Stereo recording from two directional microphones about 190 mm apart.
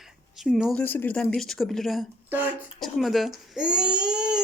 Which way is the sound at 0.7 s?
10° left (ahead or behind).